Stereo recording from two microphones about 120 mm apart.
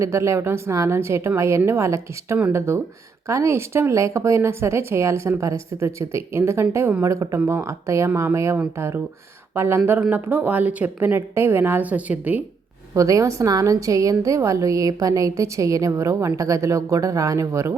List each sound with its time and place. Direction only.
0.0 s a woman's voice: 25° right (ahead or behind)
12.9 s a woman's voice: 25° right (ahead or behind)